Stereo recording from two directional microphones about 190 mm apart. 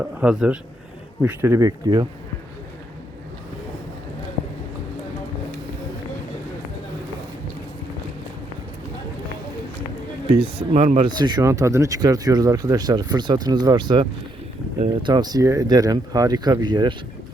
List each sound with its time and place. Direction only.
0.0 s a man's voice: 5° right (ahead or behind)
10.2 s speech: 30° right (ahead or behind)